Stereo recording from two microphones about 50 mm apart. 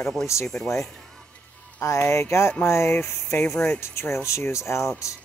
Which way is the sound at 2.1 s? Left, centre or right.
Left.